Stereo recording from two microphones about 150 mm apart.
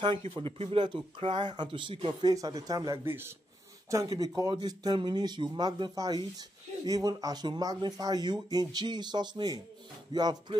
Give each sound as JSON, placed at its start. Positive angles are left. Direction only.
{"t": 0.3, "sound": "speech", "side_deg": -35}
{"t": 3.1, "sound": "a man's voice", "side_deg": -15}